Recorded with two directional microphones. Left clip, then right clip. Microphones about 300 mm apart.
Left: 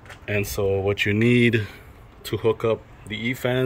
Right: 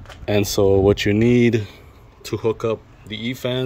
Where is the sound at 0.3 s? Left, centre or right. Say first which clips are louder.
Right 7 dB; right.